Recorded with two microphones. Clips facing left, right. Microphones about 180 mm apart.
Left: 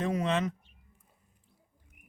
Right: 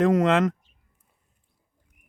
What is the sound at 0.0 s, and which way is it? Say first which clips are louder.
Speech: right 10 dB; 90° right.